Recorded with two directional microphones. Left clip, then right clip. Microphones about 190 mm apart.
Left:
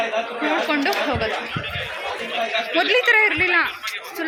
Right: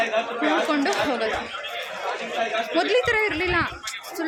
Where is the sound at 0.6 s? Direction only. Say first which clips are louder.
Left 2 dB; 5° right (ahead or behind).